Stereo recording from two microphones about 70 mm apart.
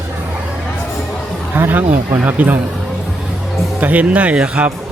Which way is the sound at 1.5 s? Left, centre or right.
Right.